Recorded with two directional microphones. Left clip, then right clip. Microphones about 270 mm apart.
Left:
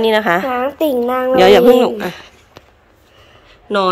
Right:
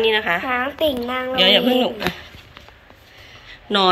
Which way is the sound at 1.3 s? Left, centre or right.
Centre.